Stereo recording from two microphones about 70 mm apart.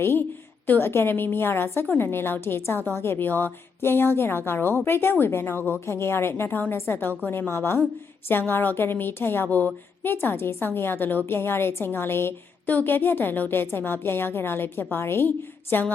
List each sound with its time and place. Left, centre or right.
0.0 s a woman's voice: left